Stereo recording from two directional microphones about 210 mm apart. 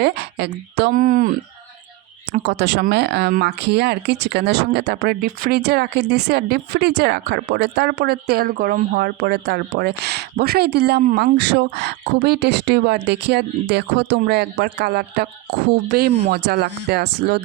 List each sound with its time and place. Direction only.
0.0 s speech: 50° right (ahead or behind)
2.4 s speech: 50° right (ahead or behind)